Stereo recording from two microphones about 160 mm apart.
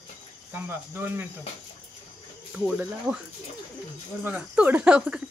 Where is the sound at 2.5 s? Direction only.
5° right (ahead or behind).